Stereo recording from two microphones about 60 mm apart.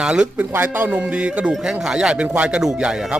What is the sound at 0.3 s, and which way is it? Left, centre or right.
Speech, right.